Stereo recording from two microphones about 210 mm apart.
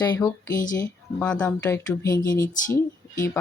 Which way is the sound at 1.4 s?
15° left (ahead or behind).